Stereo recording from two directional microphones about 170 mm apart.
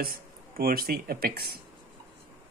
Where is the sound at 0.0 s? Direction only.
60° right (ahead or behind).